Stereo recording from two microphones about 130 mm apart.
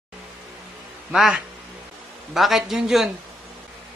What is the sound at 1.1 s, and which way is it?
A man's voice, 5° right (ahead or behind).